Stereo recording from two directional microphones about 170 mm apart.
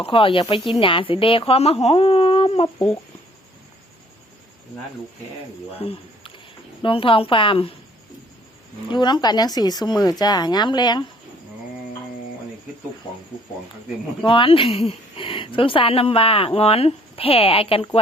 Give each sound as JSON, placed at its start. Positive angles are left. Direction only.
{"t": 0.0, "sound": "speech", "side_deg": 30}
{"t": 2.7, "sound": "speech", "side_deg": 10}
{"t": 5.7, "sound": "speech", "side_deg": 35}
{"t": 8.9, "sound": "speech", "side_deg": 25}
{"t": 14.3, "sound": "speech", "side_deg": 30}